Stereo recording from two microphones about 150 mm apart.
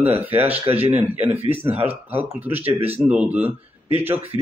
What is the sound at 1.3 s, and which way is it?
Speech, 40° right (ahead or behind).